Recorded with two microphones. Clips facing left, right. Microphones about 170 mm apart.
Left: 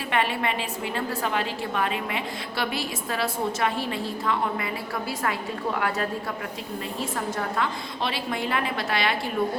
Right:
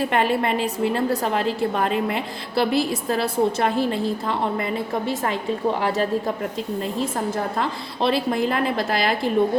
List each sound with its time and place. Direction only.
0.0 s a woman's voice: 40° right (ahead or behind)
7.3 s a woman's voice: 35° right (ahead or behind)